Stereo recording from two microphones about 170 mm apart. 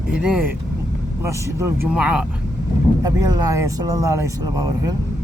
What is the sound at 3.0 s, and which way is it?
Speech, 20° right (ahead or behind).